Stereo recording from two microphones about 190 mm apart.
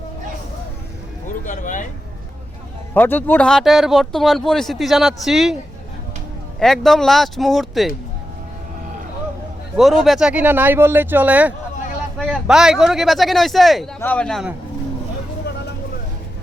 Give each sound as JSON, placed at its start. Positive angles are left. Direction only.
{"t": 1.5, "sound": "a sound", "side_deg": 45}
{"t": 2.9, "sound": "speech", "side_deg": 10}
{"t": 6.6, "sound": "speech", "side_deg": 0}
{"t": 9.7, "sound": "speech", "side_deg": 0}